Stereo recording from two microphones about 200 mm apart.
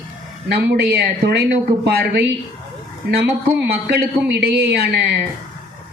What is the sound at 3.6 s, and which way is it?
Speech, 55° right (ahead or behind).